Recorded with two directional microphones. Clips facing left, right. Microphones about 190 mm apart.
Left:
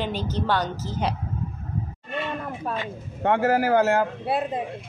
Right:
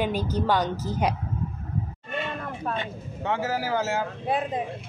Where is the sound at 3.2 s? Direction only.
55° left (ahead or behind).